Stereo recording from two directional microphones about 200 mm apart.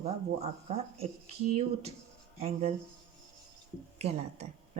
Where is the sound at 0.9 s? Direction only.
30° right (ahead or behind).